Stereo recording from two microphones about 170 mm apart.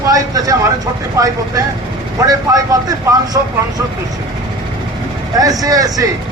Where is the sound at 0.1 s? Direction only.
20° right (ahead or behind).